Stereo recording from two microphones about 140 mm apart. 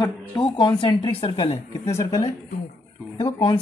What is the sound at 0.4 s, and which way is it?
A woman's voice, 35° left (ahead or behind).